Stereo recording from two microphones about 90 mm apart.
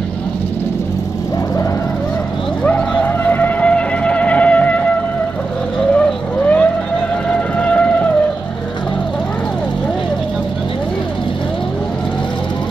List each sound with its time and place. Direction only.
2.6 s music: 15° left (ahead or behind)
5.9 s vehicle: 15° left (ahead or behind)
7.2 s music: 15° left (ahead or behind)